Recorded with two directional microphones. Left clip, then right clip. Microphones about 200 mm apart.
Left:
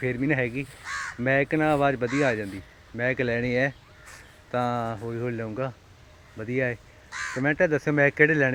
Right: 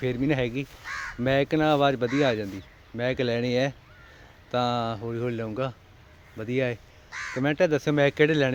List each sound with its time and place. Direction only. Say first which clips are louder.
0.0 s speech: left 1 dB; 15° right (ahead or behind)
0.9 s speech: left 3 dB; 45° left (ahead or behind)
1.2 s speech: even; 15° right (ahead or behind)
7.1 s speech: left 1 dB; 45° left (ahead or behind)
7.4 s speech: even; 10° right (ahead or behind)